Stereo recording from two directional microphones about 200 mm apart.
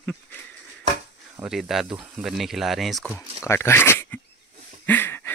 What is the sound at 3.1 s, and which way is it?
Speech, 10° left (ahead or behind).